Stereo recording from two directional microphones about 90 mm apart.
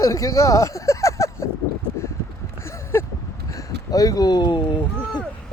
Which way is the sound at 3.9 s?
40° left (ahead or behind).